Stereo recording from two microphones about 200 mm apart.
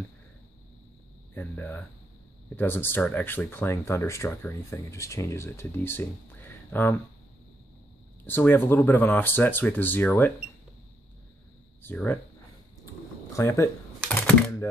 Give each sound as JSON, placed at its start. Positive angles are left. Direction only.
{"t": 1.3, "sound": "speech", "side_deg": 10}
{"t": 8.3, "sound": "speech", "side_deg": 10}
{"t": 11.8, "sound": "speech", "side_deg": 10}
{"t": 12.8, "sound": "a sound", "side_deg": 15}